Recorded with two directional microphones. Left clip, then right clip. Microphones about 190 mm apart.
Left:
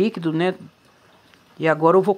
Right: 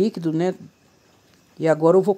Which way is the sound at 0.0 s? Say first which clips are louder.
Left 1 dB; 15° right (ahead or behind).